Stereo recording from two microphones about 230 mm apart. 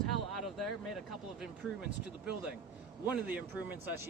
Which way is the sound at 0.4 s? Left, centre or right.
Centre.